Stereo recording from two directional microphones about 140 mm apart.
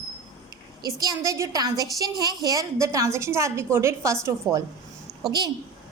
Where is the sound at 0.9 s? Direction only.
25° right (ahead or behind).